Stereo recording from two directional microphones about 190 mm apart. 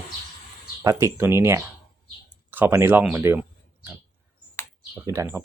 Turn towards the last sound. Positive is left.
turn(degrees=-15)  # may be behind; listen again after turning